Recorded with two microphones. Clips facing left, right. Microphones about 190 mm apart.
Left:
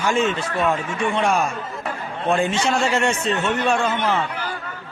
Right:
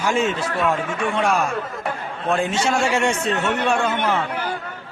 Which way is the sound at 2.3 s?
5° right (ahead or behind).